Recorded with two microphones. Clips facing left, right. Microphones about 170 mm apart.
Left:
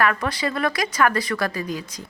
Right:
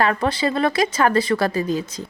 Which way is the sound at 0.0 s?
30° right (ahead or behind).